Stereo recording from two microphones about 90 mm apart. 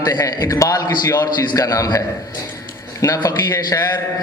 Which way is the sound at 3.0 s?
40° left (ahead or behind).